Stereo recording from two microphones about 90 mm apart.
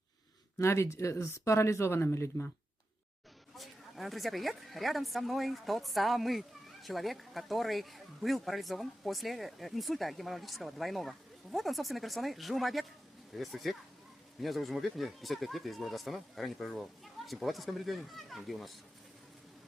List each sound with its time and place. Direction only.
0.6 s speech: 30° left (ahead or behind)
3.6 s speech: centre (ahead or behind)